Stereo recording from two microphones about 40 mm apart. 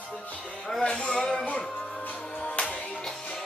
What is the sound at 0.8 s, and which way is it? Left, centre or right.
Music, left.